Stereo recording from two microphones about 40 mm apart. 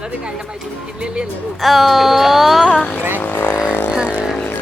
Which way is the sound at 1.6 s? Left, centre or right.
Centre.